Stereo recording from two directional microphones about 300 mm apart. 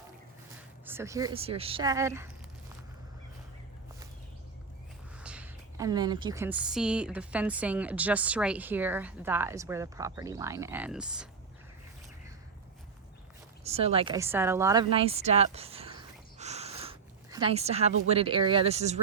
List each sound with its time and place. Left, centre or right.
0.9 s a woman's voice: centre
5.1 s a woman's voice: centre
13.7 s a woman's voice: centre